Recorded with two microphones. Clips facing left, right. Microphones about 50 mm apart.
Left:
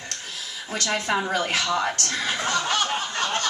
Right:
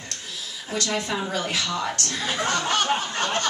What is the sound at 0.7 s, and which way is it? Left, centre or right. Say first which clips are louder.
Speech: left 2 dB; left.